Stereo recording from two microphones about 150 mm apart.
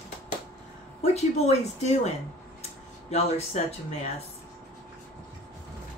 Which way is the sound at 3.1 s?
45° left (ahead or behind).